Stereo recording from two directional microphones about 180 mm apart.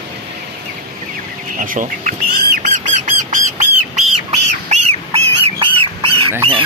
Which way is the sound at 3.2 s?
45° right (ahead or behind).